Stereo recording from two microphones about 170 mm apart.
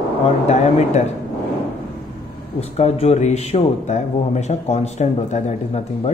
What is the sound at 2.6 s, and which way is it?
Speech, 40° left (ahead or behind).